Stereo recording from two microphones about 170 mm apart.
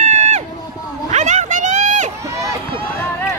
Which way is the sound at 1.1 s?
45° right (ahead or behind).